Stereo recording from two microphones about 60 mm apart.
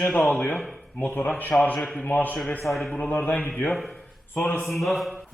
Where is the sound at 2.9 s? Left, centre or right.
Left.